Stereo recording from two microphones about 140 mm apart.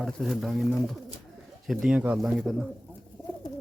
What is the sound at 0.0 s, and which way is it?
Speech, centre (ahead or behind).